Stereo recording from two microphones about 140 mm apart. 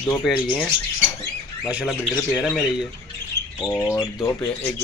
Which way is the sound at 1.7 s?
5° right (ahead or behind).